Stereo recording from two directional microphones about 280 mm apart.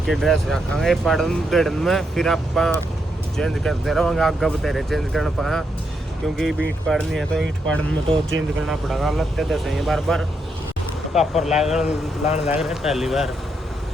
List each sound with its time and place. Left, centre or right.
0.0 s speech: centre
8.6 s speech: centre
12.2 s speech: left
12.5 s speech: centre